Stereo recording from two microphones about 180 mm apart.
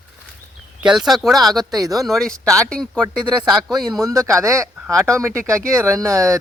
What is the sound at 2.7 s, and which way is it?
Speech, 5° left (ahead or behind).